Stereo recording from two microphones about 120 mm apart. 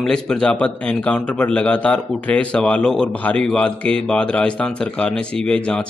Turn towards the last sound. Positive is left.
turn(degrees=10)  # may be behind; listen again after turning